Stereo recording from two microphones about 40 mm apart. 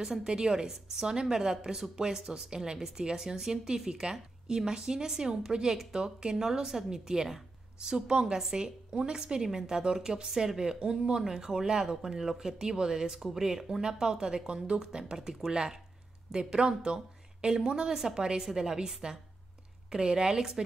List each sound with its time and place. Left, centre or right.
0.0 s a woman's voice: centre